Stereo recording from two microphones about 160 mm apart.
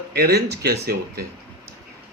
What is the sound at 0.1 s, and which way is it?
Speech, 80° right.